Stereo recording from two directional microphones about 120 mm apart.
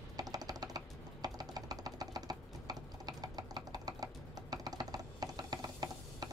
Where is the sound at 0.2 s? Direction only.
30° right (ahead or behind).